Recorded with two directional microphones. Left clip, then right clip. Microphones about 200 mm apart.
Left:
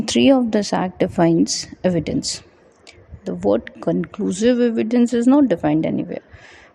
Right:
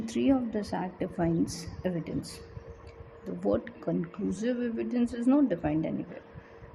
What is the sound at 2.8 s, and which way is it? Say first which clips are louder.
Speech: left 14 dB; 40° left (ahead or behind).